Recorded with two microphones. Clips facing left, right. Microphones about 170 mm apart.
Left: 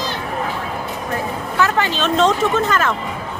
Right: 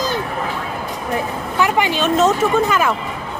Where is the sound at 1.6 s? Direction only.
15° right (ahead or behind).